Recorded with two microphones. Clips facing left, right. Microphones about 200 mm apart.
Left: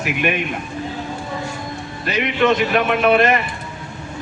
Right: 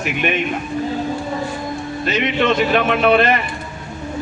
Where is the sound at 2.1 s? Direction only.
30° right (ahead or behind).